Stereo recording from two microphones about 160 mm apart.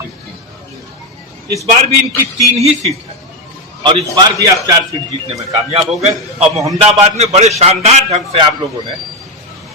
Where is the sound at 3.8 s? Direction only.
25° right (ahead or behind).